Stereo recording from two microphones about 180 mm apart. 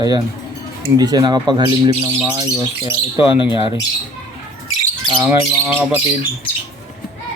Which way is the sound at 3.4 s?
25° left (ahead or behind).